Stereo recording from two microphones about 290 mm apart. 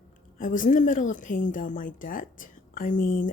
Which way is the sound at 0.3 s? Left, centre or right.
Left.